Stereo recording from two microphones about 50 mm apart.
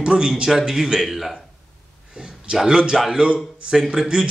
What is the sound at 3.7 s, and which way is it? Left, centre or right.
Speech, centre.